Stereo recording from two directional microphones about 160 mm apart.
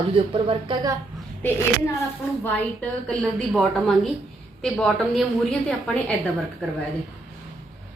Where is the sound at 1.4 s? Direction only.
10° left (ahead or behind).